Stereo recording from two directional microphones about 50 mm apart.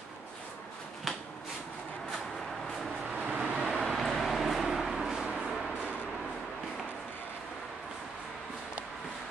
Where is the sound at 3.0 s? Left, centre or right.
Centre.